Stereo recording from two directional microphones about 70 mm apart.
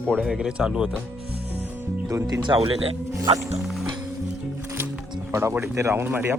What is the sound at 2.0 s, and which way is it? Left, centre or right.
Speech, right.